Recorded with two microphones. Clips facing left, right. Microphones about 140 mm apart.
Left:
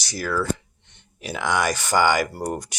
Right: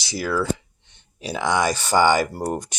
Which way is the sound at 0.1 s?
10° right (ahead or behind).